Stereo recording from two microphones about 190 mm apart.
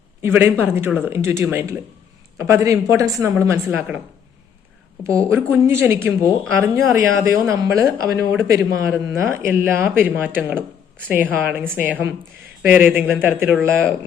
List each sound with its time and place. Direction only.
0.2 s speech: 10° right (ahead or behind)
5.0 s speech: 15° right (ahead or behind)